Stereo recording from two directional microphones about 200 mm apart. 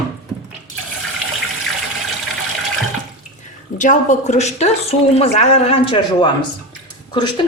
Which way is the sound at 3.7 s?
40° left (ahead or behind).